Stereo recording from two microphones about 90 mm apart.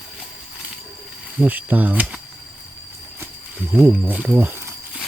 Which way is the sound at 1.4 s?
20° right (ahead or behind).